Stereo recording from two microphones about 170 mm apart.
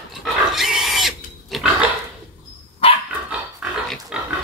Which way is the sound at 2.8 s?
35° left (ahead or behind).